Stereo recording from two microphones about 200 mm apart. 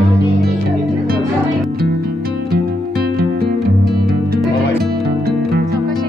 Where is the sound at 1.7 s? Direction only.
50° right (ahead or behind).